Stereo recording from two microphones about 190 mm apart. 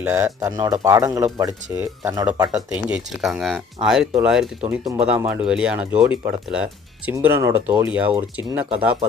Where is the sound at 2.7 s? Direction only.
5° right (ahead or behind).